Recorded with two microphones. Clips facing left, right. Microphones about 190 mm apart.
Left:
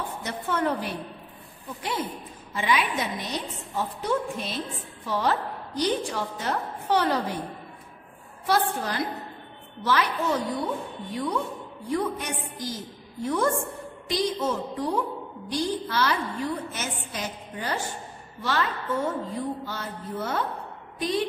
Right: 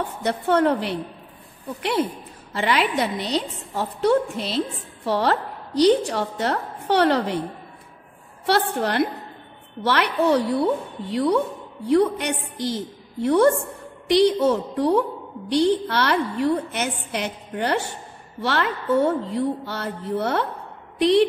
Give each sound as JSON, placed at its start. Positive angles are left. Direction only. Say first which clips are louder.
{"t": 0.2, "sound": "a woman's voice", "louder": "right 9 dB", "side_deg": -65}
{"t": 8.5, "sound": "a woman's voice", "louder": "right 4 dB", "side_deg": -70}